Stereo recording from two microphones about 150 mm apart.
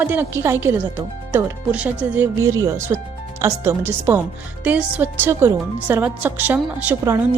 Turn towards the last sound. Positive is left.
turn(degrees=-15)  # may be behind; listen again after turning